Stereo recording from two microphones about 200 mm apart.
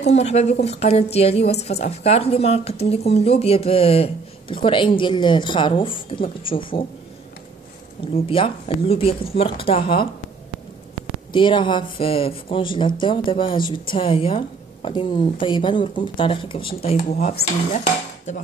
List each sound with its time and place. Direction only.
0.1 s a woman's voice: 35° left (ahead or behind)
8.0 s speech: 25° left (ahead or behind)
11.3 s a woman's voice: 25° left (ahead or behind)